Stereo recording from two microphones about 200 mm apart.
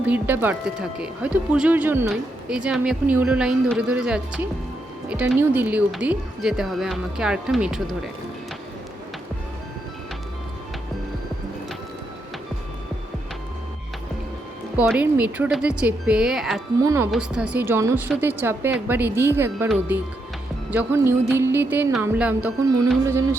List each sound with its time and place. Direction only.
0.0 s speech: 10° right (ahead or behind)
14.8 s speech: 5° right (ahead or behind)
16.8 s music: 15° right (ahead or behind)
17.1 s music: 5° right (ahead or behind)